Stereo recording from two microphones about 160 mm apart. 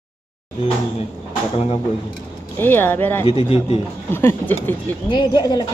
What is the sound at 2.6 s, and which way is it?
Speech, 10° left (ahead or behind).